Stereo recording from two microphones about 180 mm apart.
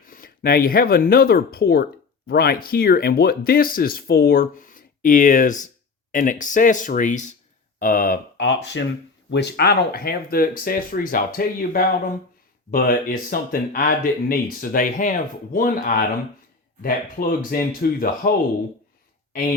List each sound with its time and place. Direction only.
0.0 s speech: 50° left (ahead or behind)
8.4 s speech: 80° left
9.3 s speech: 65° left (ahead or behind)